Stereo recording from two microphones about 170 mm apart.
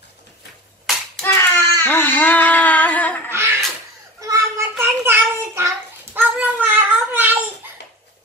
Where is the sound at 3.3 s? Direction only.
15° right (ahead or behind).